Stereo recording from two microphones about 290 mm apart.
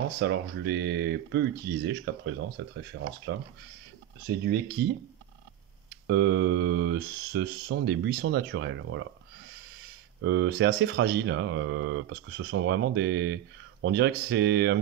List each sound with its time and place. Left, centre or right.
0.2 s speech: right
4.3 s speech: right
6.0 s speech: right
10.2 s speech: right